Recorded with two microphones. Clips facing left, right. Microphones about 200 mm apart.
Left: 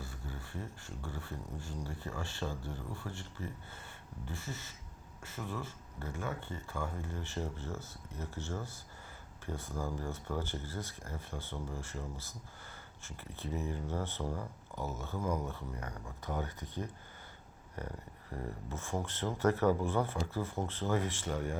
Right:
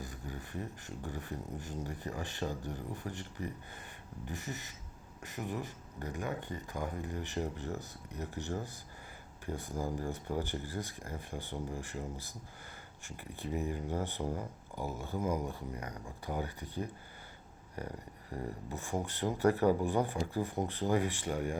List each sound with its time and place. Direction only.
0.0 s speech: 15° right (ahead or behind)